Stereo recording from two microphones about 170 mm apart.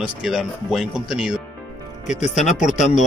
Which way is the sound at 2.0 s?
45° left (ahead or behind).